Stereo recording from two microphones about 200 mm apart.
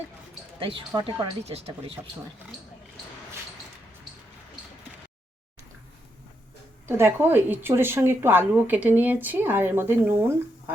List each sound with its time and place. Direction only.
0.6 s speech: 25° right (ahead or behind)
6.8 s a woman's voice: 10° right (ahead or behind)